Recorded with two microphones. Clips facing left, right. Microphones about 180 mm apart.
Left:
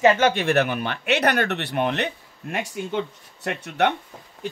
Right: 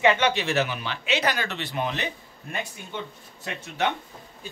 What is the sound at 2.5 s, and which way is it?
Speech, 85° left.